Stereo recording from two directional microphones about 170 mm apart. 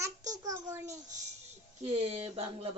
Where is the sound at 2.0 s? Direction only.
35° right (ahead or behind).